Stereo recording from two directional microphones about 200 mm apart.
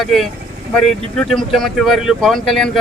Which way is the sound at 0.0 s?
Centre (ahead or behind).